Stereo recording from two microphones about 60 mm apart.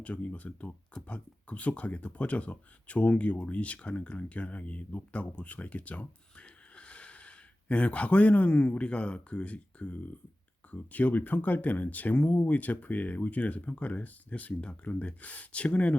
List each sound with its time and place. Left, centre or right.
0.0 s speech: left